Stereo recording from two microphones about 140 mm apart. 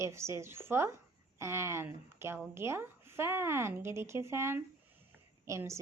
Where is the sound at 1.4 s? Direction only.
20° right (ahead or behind).